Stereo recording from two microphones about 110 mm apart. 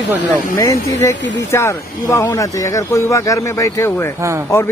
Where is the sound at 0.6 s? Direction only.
30° left (ahead or behind).